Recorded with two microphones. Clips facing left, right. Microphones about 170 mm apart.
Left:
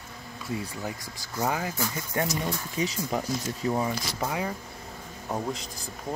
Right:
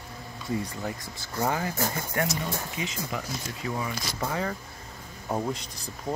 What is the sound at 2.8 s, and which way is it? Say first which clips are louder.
Speech: left 4 dB; 35° left (ahead or behind).